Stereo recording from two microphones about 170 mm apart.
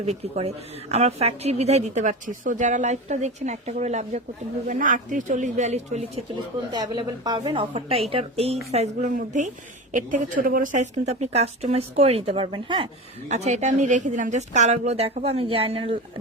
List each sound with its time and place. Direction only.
0.0 s a woman's voice: 40° right (ahead or behind)
6.7 s a woman's voice: 25° right (ahead or behind)
13.2 s a woman's voice: 45° right (ahead or behind)